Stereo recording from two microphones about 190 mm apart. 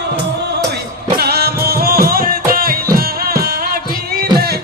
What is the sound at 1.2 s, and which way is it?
Music, 55° right (ahead or behind).